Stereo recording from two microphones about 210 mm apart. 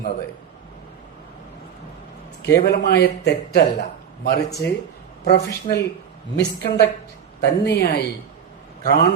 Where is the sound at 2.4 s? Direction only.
55° left (ahead or behind).